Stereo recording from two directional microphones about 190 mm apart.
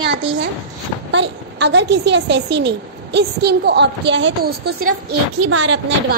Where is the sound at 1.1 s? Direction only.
65° right (ahead or behind); by 5.0 s 50° right (ahead or behind).